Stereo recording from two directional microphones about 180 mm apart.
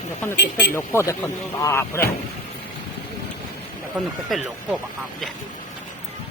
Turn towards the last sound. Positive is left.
turn(degrees=0)  # may be behind; listen again after turning